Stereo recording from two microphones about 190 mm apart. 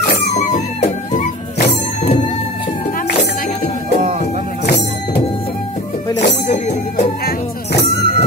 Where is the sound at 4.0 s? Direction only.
35° right (ahead or behind).